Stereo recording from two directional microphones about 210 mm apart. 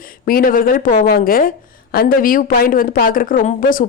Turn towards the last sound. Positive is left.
turn(degrees=40)  # may be behind; listen again after turning